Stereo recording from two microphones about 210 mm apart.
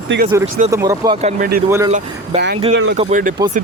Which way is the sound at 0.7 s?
15° right (ahead or behind).